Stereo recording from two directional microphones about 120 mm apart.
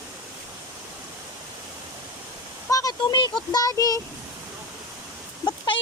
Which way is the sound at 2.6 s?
30° left (ahead or behind).